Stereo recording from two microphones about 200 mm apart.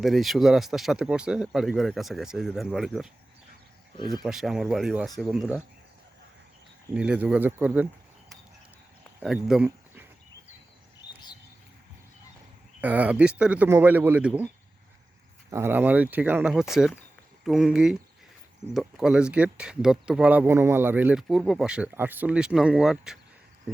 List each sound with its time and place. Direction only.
0.0 s speech: centre (ahead or behind)
3.9 s speech: 20° left (ahead or behind)
4.2 s speech: centre (ahead or behind)
6.9 s speech: 5° right (ahead or behind)
9.2 s speech: 5° right (ahead or behind)
12.8 s speech: 10° right (ahead or behind)
15.4 s speech: 15° right (ahead or behind)